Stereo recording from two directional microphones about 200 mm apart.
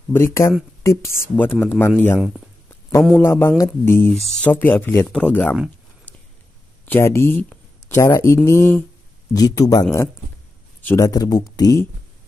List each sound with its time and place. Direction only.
0.1 s speech: 15° left (ahead or behind)
2.1 s speech: centre (ahead or behind)
3.2 s speech: 10° left (ahead or behind)
6.9 s speech: 10° left (ahead or behind)